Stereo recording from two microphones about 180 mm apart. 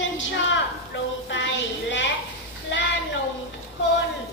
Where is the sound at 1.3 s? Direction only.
90° left.